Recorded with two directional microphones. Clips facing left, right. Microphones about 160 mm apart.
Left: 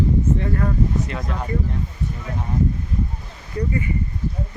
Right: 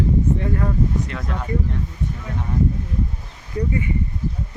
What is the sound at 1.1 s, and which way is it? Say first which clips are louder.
Speech: left 1 dB; 5° left (ahead or behind).